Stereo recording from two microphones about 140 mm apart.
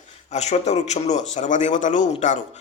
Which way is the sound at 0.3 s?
55° left (ahead or behind).